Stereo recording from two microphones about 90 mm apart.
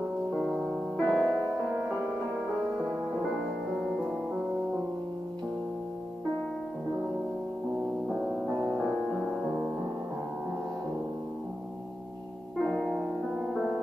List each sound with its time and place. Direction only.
0.3 s music: 10° right (ahead or behind)
0.9 s music: 10° left (ahead or behind)
8.1 s music: centre (ahead or behind)
12.6 s music: 5° left (ahead or behind)